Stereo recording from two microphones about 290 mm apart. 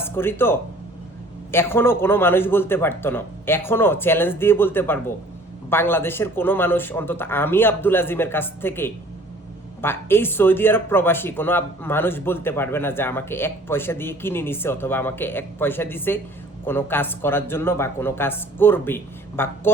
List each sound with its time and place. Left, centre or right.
0.0 s speech: centre